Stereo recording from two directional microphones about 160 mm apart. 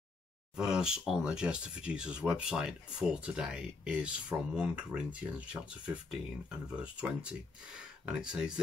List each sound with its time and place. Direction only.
0.6 s speech: 5° right (ahead or behind)
6.7 s speech: 5° right (ahead or behind)